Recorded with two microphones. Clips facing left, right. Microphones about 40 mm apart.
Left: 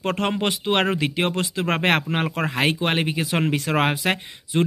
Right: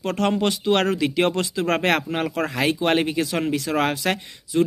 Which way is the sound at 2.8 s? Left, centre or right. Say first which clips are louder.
Right 2 dB; centre.